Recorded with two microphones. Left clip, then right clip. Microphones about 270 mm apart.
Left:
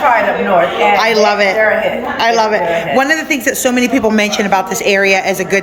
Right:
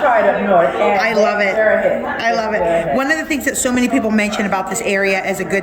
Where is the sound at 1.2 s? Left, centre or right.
Centre.